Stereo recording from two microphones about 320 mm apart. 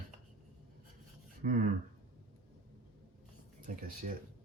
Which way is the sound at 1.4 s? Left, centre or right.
Right.